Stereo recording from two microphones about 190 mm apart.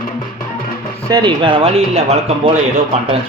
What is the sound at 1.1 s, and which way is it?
Speech, 25° right (ahead or behind).